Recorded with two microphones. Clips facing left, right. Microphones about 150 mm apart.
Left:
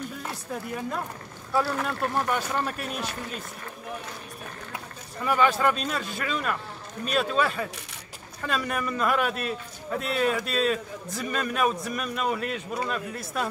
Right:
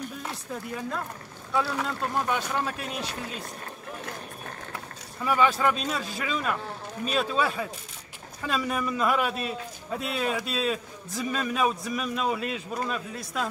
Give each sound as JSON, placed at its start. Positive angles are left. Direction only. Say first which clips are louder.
{"t": 0.2, "sound": "a man's voice", "louder": "left 1 dB", "side_deg": 5}
{"t": 5.2, "sound": "a man's voice", "louder": "left 1 dB", "side_deg": 0}